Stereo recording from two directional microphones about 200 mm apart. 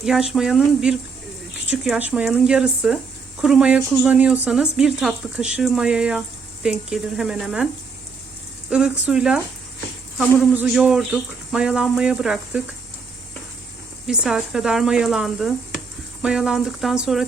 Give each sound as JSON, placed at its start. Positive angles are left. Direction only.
{"t": 0.0, "sound": "speech", "side_deg": -5}
{"t": 8.7, "sound": "speech", "side_deg": -5}
{"t": 14.1, "sound": "speech", "side_deg": 0}